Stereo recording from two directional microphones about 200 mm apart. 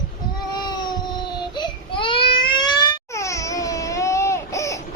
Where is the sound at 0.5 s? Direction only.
20° left (ahead or behind).